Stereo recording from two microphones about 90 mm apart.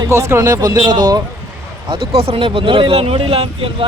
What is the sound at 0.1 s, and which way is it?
Speech, 30° right (ahead or behind).